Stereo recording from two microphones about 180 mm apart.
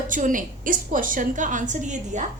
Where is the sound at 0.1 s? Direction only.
45° right (ahead or behind).